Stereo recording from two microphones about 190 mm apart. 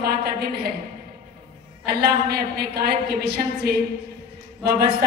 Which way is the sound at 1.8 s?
55° right (ahead or behind).